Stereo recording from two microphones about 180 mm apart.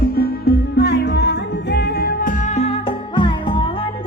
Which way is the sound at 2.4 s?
35° left (ahead or behind).